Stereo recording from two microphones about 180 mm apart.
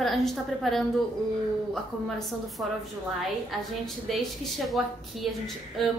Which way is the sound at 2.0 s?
Centre (ahead or behind).